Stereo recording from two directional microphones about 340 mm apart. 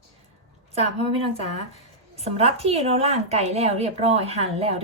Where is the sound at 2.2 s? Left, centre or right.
Centre.